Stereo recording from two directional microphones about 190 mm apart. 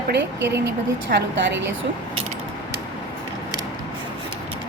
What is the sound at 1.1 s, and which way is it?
Speech, 50° right (ahead or behind).